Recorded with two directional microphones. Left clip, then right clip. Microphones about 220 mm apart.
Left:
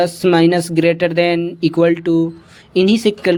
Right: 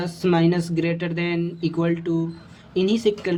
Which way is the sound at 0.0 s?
35° left (ahead or behind).